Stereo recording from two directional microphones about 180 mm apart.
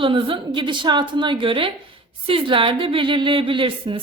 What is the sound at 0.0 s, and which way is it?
A woman's voice, 30° right (ahead or behind).